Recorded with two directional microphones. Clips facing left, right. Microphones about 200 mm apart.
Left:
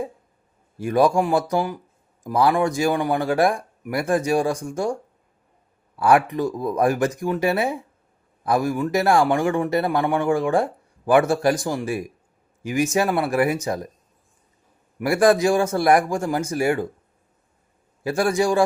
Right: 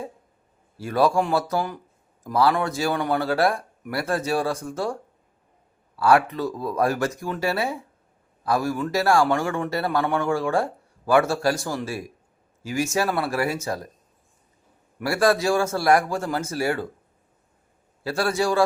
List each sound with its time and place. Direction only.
0.8 s speech: 15° left (ahead or behind)
6.0 s speech: 15° left (ahead or behind)
14.9 s speech: 15° left (ahead or behind)
18.0 s speech: 15° left (ahead or behind)